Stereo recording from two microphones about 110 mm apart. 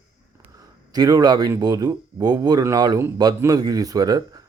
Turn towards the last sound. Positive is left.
turn(degrees=-35)  # may be behind; listen again after turning